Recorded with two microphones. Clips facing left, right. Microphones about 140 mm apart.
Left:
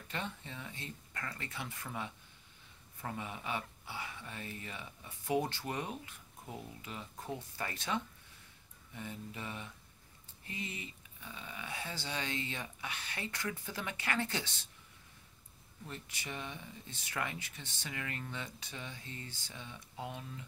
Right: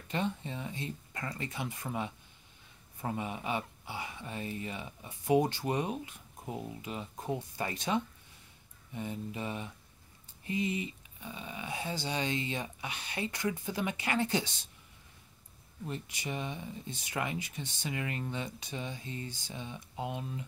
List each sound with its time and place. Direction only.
0.1 s speech: 20° right (ahead or behind)
15.9 s speech: 15° right (ahead or behind)